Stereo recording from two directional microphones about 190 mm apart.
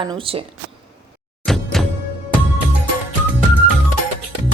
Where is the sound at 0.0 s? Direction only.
30° right (ahead or behind).